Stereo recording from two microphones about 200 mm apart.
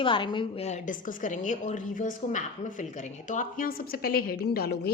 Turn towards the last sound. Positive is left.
turn(degrees=50)  # may be behind; listen again after turning